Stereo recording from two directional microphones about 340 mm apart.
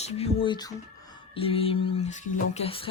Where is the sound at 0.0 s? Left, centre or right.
Centre.